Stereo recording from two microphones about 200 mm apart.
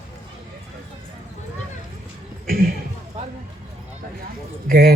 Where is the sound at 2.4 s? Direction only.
45° right (ahead or behind).